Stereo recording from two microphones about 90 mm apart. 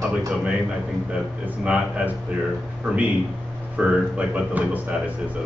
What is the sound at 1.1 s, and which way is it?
Speech, 15° right (ahead or behind).